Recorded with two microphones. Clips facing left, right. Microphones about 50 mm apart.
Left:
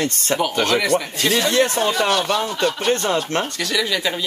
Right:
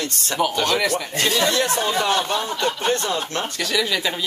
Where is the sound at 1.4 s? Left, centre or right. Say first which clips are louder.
Left 3 dB; left.